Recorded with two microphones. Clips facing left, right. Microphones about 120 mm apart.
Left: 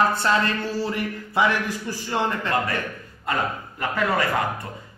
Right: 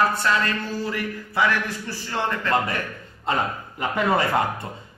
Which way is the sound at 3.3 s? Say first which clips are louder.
Right 1 dB; 25° right (ahead or behind).